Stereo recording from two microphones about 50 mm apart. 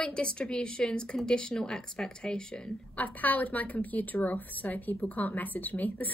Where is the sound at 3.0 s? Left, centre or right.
Left.